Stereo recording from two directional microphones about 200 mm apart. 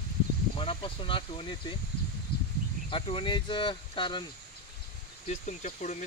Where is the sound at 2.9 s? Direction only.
25° left (ahead or behind).